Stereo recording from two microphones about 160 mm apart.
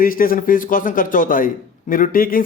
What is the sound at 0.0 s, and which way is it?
Speech, 60° left (ahead or behind).